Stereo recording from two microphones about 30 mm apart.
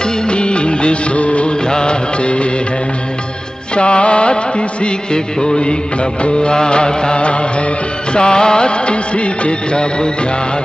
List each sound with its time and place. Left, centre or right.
0.3 s music of bollywood: left
1.7 s music: left
3.7 s music: left